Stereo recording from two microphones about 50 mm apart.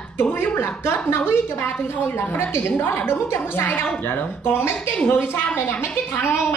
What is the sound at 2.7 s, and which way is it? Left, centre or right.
Speech, left.